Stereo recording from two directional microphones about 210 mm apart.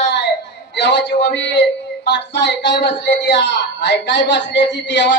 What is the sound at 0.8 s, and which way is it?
A man's voice, 55° left (ahead or behind).